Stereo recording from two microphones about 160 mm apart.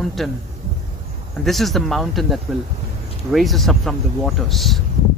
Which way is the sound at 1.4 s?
Centre (ahead or behind).